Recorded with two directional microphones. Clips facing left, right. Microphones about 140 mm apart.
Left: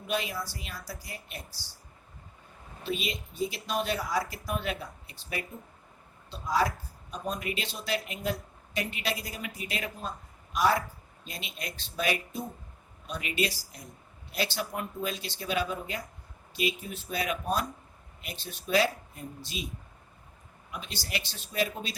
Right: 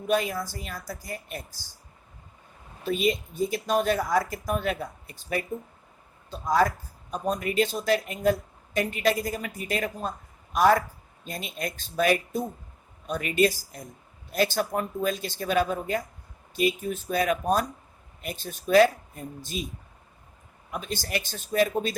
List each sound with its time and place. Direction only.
0.1 s speech: 50° right (ahead or behind)
2.8 s speech: 45° right (ahead or behind)
20.7 s speech: 45° right (ahead or behind)